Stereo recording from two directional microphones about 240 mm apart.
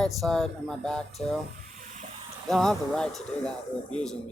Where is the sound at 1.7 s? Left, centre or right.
Right.